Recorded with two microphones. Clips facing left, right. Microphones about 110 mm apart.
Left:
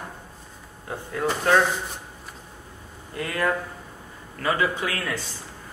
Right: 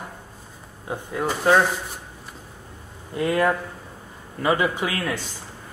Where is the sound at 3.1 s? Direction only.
20° right (ahead or behind).